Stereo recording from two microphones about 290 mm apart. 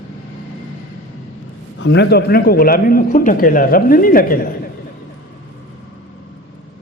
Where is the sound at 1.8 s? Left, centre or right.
Left.